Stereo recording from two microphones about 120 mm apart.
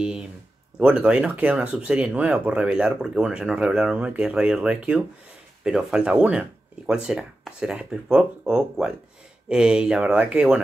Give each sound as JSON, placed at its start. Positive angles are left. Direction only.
{"t": 0.7, "sound": "speech", "side_deg": -10}